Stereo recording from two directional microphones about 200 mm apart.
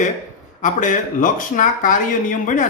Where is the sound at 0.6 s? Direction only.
40° left (ahead or behind).